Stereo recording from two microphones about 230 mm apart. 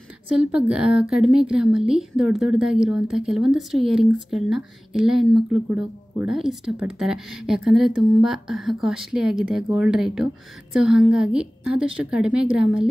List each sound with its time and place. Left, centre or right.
0.4 s a woman's voice: centre